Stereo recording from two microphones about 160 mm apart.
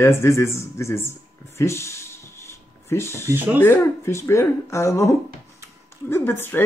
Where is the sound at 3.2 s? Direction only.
15° right (ahead or behind).